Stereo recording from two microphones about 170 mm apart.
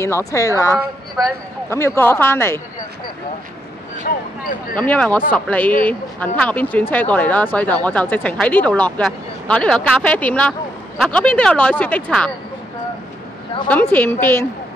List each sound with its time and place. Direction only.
0.0 s speech: 15° left (ahead or behind)
4.1 s speech: 60° left (ahead or behind)
4.7 s speech: 10° left (ahead or behind)
13.7 s speech: 10° left (ahead or behind)